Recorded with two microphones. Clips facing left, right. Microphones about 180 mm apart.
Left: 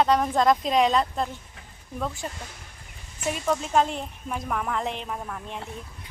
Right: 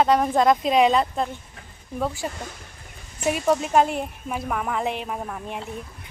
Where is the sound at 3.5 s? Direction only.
15° right (ahead or behind).